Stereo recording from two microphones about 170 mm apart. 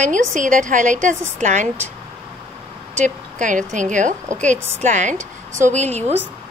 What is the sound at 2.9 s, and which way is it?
A woman's voice, 45° right (ahead or behind).